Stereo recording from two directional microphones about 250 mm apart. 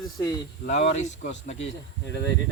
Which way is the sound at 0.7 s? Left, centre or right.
Left.